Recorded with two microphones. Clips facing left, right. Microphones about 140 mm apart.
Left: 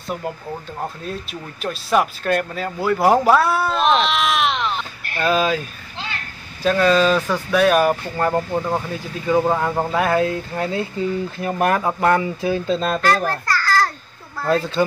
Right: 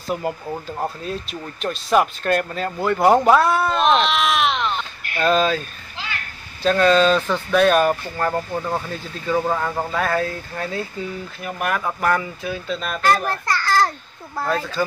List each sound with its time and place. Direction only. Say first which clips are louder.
0.1 s speech: right 2 dB; 5° right (ahead or behind)
6.6 s speech: even; 5° left (ahead or behind); by 13.0 s 30° left (ahead or behind)
13.0 s a child's voice: even; 10° right (ahead or behind)
14.5 s speech: left 6 dB; 30° left (ahead or behind)